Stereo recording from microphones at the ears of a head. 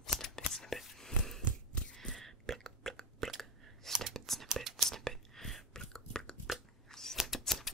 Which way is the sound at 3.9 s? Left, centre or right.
Right.